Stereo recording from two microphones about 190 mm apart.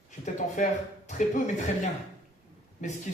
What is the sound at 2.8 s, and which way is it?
Speech, 40° left (ahead or behind).